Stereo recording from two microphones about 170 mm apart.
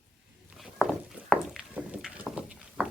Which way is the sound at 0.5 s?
Centre (ahead or behind).